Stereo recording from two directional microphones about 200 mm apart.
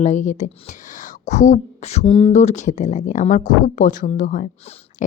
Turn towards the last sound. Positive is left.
turn(degrees=40)  # may be behind; listen again after turning